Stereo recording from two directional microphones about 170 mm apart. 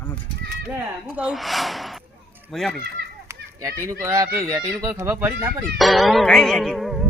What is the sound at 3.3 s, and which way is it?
Children playing, 15° right (ahead or behind).